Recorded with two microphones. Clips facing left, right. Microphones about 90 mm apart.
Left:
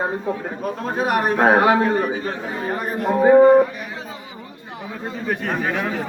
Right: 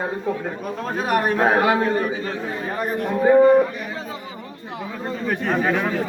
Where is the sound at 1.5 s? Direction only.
25° left (ahead or behind).